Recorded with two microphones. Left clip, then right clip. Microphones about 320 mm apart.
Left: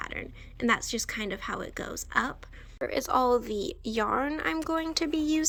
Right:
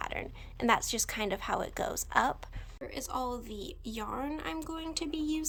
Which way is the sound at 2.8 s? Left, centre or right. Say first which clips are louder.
Left 10 dB; centre.